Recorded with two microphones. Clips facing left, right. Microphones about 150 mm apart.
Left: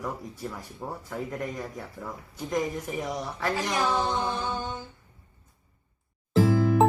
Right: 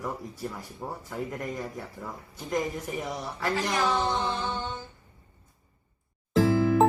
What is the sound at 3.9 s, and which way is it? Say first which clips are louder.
Music: even; 10° left (ahead or behind).